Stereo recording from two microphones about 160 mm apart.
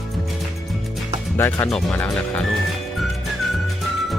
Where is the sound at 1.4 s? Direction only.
10° left (ahead or behind).